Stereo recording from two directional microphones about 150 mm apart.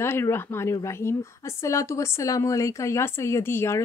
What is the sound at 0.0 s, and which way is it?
A woman's voice, 15° left (ahead or behind).